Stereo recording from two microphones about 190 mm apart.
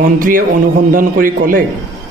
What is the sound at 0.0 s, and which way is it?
Speech, 45° right (ahead or behind).